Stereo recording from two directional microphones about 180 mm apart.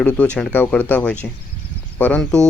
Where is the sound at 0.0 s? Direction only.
5° left (ahead or behind).